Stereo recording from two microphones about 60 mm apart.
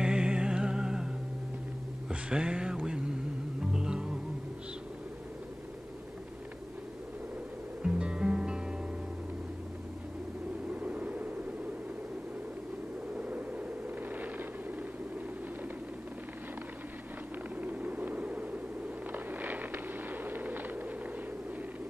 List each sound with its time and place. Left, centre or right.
0.0 s music: centre
2.0 s a sound: centre
3.7 s music: centre
7.8 s music: centre
10.7 s vehicle: right
13.1 s vehicle: right
17.6 s a sound: right